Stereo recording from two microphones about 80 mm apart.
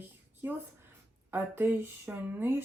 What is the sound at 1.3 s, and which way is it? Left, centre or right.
Speech, right.